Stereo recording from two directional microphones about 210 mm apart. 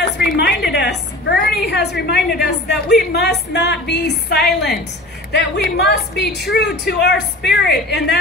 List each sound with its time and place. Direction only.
0.0 s a woman's voice: 50° left (ahead or behind)